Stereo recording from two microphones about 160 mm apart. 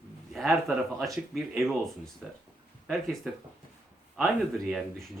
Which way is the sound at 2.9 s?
Centre (ahead or behind).